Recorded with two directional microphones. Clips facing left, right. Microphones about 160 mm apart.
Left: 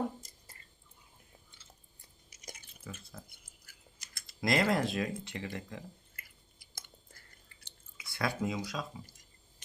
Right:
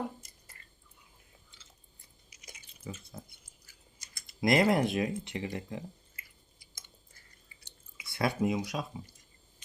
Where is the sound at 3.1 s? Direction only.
20° right (ahead or behind).